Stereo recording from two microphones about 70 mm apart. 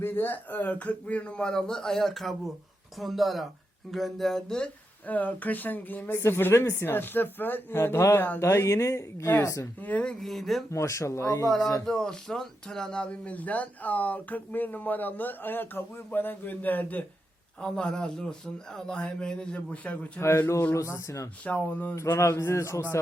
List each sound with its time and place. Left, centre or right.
0.0 s speech: left; by 4.7 s centre
5.0 s speech: left
6.1 s speech: left
9.8 s speech: centre
10.2 s speech: centre
10.7 s speech: left
11.9 s speech: centre; by 17.1 s left
17.6 s speech: centre
20.1 s speech: left
20.7 s speech: left
21.4 s speech: left
21.9 s speech: left